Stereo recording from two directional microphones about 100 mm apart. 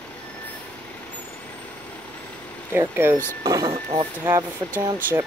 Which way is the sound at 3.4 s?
40° right (ahead or behind).